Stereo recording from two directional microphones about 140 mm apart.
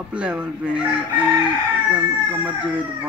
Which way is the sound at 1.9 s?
10° right (ahead or behind).